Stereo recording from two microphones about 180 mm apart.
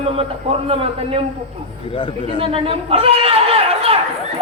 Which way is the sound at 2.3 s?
30° right (ahead or behind).